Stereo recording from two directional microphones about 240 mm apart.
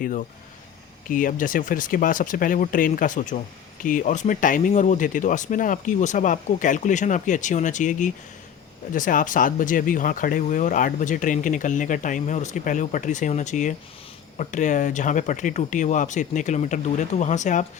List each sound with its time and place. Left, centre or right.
0.0 s speech: left